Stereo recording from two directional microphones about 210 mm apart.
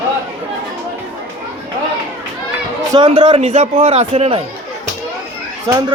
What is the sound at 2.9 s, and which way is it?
Speech, 25° right (ahead or behind).